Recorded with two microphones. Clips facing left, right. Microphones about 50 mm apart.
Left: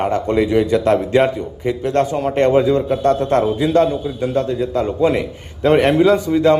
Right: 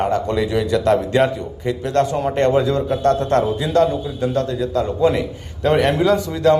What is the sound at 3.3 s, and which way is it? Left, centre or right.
Speech, left.